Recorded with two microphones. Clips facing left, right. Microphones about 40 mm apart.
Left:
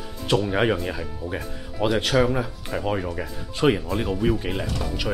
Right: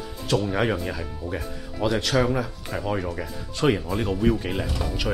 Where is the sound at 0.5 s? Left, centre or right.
Centre.